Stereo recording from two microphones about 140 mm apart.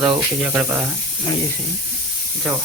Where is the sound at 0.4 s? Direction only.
10° right (ahead or behind).